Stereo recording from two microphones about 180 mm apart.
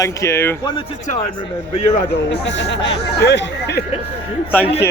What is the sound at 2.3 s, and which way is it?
Speech, 75° left (ahead or behind).